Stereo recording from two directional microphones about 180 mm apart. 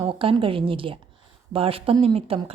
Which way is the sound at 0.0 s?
30° right (ahead or behind).